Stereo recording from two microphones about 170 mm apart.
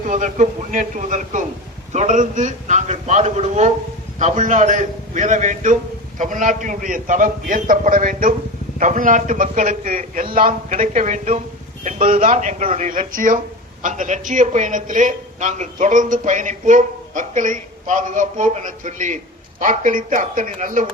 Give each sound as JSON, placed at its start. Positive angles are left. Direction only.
{"t": 0.1, "sound": "a man's voice", "side_deg": -50}